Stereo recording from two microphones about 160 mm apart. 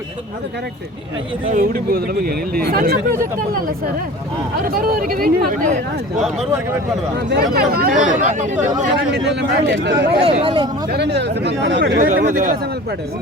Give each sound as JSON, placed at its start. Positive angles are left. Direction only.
{"t": 1.5, "sound": "speech", "side_deg": -65}
{"t": 4.7, "sound": "speech", "side_deg": -65}
{"t": 7.3, "sound": "speech", "side_deg": -75}
{"t": 9.3, "sound": "speech", "side_deg": -90}
{"t": 10.2, "sound": "speech", "side_deg": -35}
{"t": 10.9, "sound": "speech", "side_deg": -90}
{"t": 11.9, "sound": "speech", "side_deg": -55}